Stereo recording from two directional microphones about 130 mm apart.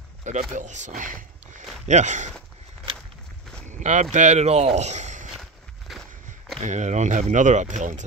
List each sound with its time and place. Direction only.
0.2 s speech: 65° right (ahead or behind)
3.6 s speech: 70° right (ahead or behind)
5.3 s walk: centre (ahead or behind)
6.6 s speech: 65° right (ahead or behind)